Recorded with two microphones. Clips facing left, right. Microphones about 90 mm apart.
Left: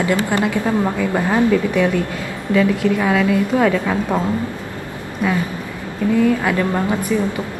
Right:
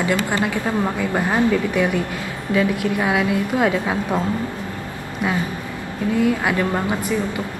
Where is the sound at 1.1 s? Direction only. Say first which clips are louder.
Left 2 dB; 15° right (ahead or behind).